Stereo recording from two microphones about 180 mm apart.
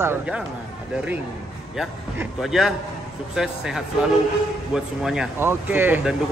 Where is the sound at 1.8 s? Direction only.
Centre (ahead or behind).